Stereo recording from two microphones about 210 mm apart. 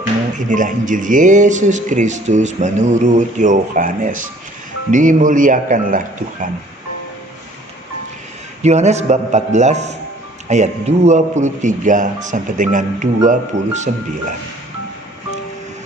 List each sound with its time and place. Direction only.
0.3 s speech: 40° right (ahead or behind)
8.6 s speech: 30° right (ahead or behind)